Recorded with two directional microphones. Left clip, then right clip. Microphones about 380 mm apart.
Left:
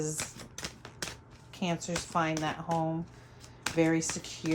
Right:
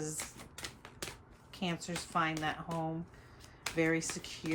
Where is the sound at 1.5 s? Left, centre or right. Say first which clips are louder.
Left 5 dB; centre.